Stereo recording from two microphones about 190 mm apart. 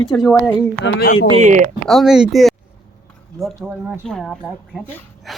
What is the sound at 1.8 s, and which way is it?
A man's voice, centre (ahead or behind).